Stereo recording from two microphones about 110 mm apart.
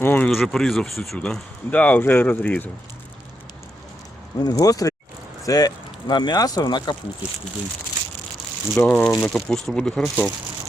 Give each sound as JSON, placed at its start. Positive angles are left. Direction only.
{"t": 0.0, "sound": "a sound", "side_deg": 15}
{"t": 0.3, "sound": "speech", "side_deg": 0}
{"t": 4.4, "sound": "speech", "side_deg": 35}
{"t": 8.7, "sound": "speech", "side_deg": 10}